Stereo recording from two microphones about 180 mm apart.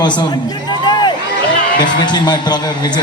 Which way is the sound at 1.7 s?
25° left (ahead or behind).